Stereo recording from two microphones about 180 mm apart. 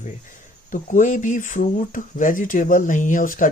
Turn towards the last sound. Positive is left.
turn(degrees=50)  # may be behind; listen again after turning